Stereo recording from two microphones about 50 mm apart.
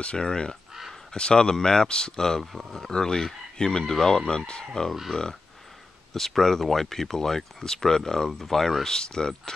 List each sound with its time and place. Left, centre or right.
0.0 s speech: centre
6.1 s speech: centre